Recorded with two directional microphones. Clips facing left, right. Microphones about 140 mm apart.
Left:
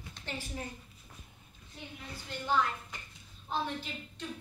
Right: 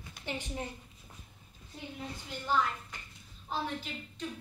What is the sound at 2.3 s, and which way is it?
Speech, 5° right (ahead or behind).